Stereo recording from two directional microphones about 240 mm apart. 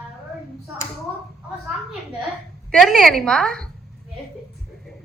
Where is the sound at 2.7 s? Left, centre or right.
Centre.